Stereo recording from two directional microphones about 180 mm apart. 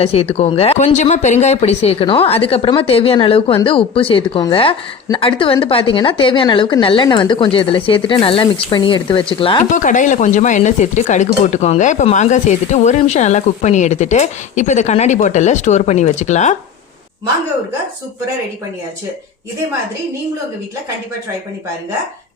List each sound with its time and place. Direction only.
0.0 s a woman's voice: 35° left (ahead or behind)
9.7 s speech: 45° left (ahead or behind)